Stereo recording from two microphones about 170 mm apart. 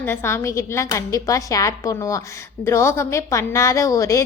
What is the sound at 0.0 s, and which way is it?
A woman's voice, 15° left (ahead or behind).